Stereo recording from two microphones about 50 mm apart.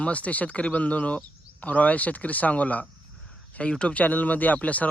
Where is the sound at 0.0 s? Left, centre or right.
Left.